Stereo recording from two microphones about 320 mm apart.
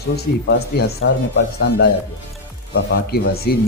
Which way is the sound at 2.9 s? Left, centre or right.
Left.